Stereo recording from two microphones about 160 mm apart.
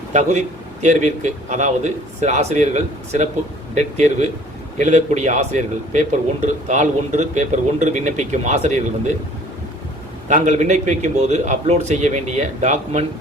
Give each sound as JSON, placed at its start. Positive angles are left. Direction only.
{"t": 0.1, "sound": "speech", "side_deg": -45}
{"t": 10.2, "sound": "speech", "side_deg": -50}